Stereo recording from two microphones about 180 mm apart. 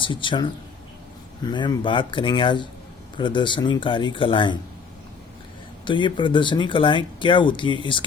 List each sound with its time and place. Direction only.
0.0 s speech: 25° left (ahead or behind)
5.8 s speech: 25° left (ahead or behind)